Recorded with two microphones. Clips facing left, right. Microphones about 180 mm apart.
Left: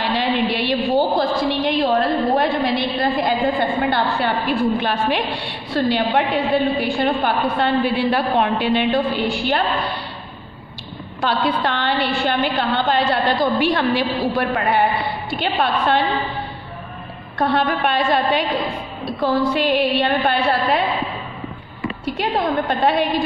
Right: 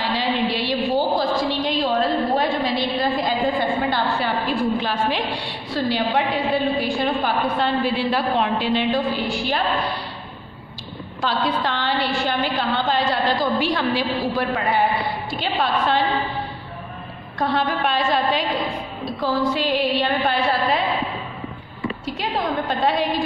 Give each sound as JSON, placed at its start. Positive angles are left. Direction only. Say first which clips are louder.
{"t": 0.0, "sound": "a sound", "louder": "left 2 dB", "side_deg": 60}
{"t": 3.8, "sound": "a woman's voice", "louder": "left 3 dB", "side_deg": 60}
{"t": 11.1, "sound": "a woman's voice", "louder": "left 3 dB", "side_deg": 60}
{"t": 17.4, "sound": "a woman's voice", "louder": "left 3 dB", "side_deg": 60}
{"t": 22.0, "sound": "a woman's voice", "louder": "left 5 dB", "side_deg": 60}